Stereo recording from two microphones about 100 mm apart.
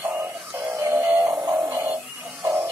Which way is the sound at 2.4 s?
30° right (ahead or behind).